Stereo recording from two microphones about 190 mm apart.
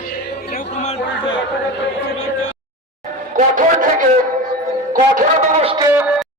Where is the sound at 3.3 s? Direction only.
45° right (ahead or behind).